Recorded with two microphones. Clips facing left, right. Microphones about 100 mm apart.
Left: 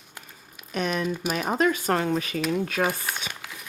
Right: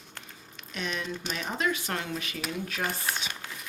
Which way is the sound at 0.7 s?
50° left (ahead or behind).